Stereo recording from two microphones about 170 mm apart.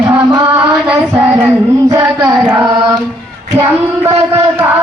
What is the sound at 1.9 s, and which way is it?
Mantra, 25° right (ahead or behind).